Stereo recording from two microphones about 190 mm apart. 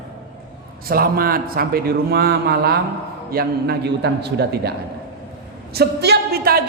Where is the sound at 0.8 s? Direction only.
50° right (ahead or behind).